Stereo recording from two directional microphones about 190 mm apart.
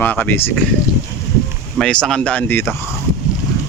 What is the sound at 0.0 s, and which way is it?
Speech, 10° left (ahead or behind).